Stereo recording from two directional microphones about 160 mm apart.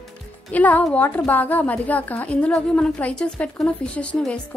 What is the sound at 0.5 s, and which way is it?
A woman's voice, 10° left (ahead or behind).